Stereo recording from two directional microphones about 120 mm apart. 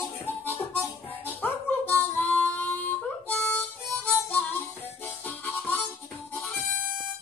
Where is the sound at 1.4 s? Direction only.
15° left (ahead or behind).